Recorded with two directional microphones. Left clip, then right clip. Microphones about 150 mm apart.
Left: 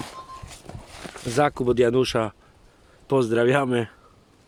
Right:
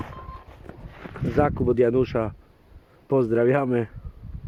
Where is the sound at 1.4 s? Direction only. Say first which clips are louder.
Left 1 dB; 15° left (ahead or behind).